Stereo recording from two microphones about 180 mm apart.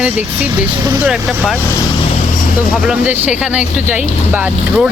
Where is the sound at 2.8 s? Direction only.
10° right (ahead or behind).